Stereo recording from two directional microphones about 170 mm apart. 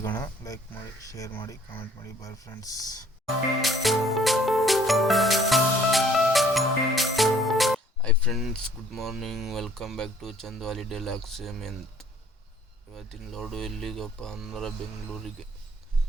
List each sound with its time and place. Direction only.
0.2 s speech: 20° left (ahead or behind)
3.6 s music: centre (ahead or behind)
12.9 s speech: centre (ahead or behind)